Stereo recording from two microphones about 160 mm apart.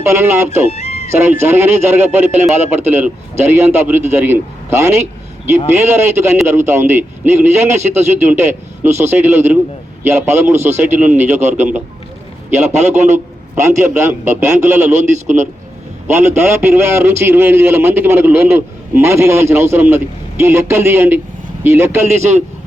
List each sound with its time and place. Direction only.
0.0 s a man's voice: 15° right (ahead or behind)
0.7 s music: 45° left (ahead or behind)
1.3 s a man's voice: 15° right (ahead or behind)
12.9 s a man's voice: 15° right (ahead or behind)
16.0 s a man's voice: 15° right (ahead or behind)